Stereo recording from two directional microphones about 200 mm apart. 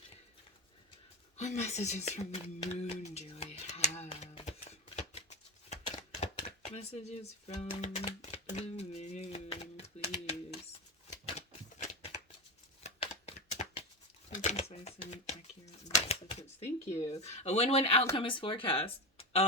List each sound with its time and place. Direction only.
1.4 s speech: 35° left (ahead or behind)
6.0 s music: 30° left (ahead or behind)
12.8 s a sound: 30° left (ahead or behind)
14.3 s typewriter: 35° left (ahead or behind)
16.9 s speech: 35° left (ahead or behind)